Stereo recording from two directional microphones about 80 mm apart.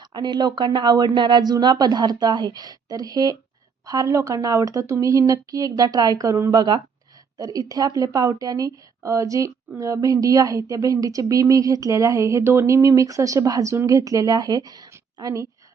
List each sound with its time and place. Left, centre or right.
0.0 s speech: right
0.5 s a woman's voice: right
6.6 s speech: right
7.3 s a woman's voice: right